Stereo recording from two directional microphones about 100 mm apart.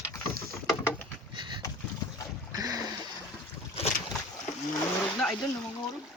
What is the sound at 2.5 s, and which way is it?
Boat, 40° right (ahead or behind).